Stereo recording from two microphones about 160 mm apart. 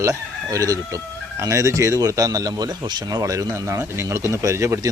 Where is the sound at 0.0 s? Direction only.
20° right (ahead or behind).